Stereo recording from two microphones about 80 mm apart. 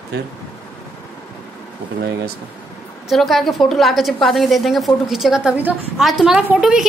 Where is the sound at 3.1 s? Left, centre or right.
Centre.